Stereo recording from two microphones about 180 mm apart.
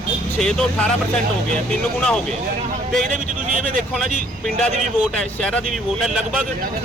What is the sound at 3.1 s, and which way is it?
Speech, 45° right (ahead or behind).